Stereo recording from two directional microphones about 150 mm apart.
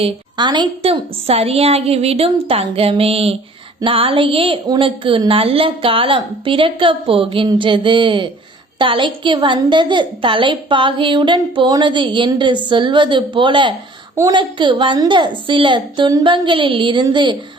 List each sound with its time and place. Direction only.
0.0 s a woman's voice: 30° right (ahead or behind)